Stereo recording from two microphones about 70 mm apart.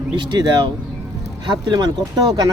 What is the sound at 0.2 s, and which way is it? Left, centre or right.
Speech, right.